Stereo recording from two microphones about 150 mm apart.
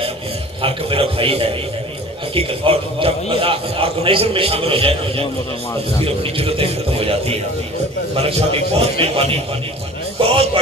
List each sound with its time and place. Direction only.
0.6 s a man's voice: 35° right (ahead or behind)